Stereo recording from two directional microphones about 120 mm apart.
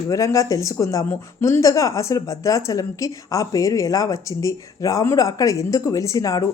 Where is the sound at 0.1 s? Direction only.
25° left (ahead or behind).